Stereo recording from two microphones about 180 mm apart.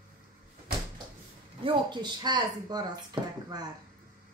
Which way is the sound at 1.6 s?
25° right (ahead or behind).